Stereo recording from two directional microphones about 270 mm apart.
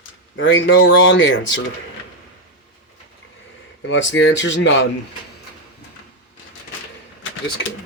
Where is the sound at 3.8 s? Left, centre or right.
Left.